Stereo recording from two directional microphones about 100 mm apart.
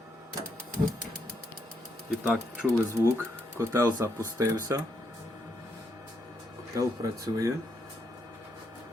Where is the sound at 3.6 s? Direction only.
35° right (ahead or behind).